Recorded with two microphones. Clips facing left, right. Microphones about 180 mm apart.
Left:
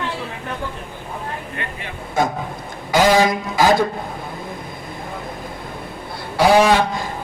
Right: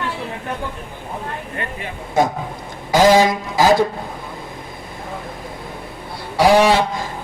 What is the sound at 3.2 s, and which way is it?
Speech, 40° right (ahead or behind).